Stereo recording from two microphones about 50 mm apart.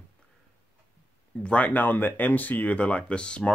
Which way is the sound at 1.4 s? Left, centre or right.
Left.